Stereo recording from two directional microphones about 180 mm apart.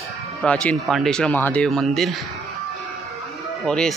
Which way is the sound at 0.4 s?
5° left (ahead or behind).